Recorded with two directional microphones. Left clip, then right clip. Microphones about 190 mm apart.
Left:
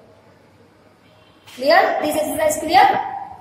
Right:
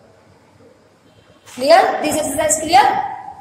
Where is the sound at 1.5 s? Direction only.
15° right (ahead or behind).